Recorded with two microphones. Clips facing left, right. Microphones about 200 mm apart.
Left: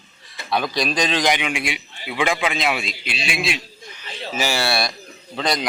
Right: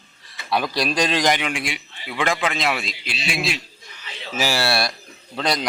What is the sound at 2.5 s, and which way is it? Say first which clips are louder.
Speech: left 1 dB; centre (ahead or behind).